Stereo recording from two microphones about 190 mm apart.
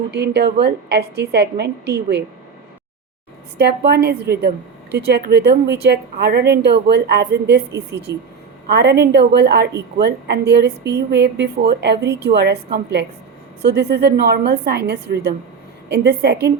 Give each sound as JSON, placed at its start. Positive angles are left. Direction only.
{"t": 0.1, "sound": "a woman's voice", "side_deg": -60}
{"t": 3.6, "sound": "a woman's voice", "side_deg": -60}
{"t": 8.1, "sound": "a woman's voice", "side_deg": -15}
{"t": 8.6, "sound": "a woman's voice", "side_deg": -60}